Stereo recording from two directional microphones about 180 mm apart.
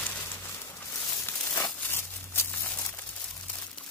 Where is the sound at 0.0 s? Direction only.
10° left (ahead or behind).